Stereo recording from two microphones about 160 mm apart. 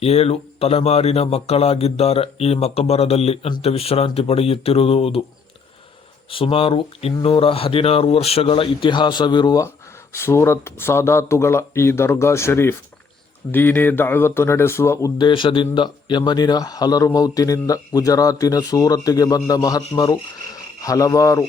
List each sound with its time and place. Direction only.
0.0 s speech: 40° left (ahead or behind)
6.3 s speech: 35° left (ahead or behind); by 15.1 s 15° left (ahead or behind)
15.2 s speech: 30° left (ahead or behind)